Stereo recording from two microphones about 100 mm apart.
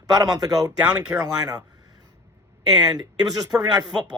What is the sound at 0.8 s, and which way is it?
Speech, 10° right (ahead or behind).